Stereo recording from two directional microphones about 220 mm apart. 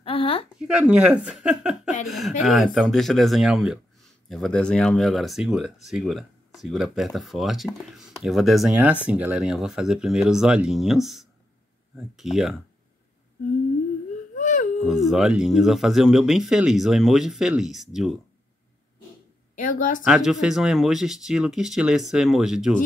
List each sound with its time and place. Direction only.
0.0 s a sound: 25° left (ahead or behind)
0.6 s speech: 5° right (ahead or behind)
14.4 s a sound: 35° left (ahead or behind)
14.9 s speech: centre (ahead or behind)
19.6 s speech: 35° left (ahead or behind)
20.1 s speech: centre (ahead or behind)